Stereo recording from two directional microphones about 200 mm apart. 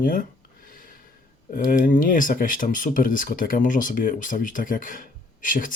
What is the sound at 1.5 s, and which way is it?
Speech, 45° left (ahead or behind).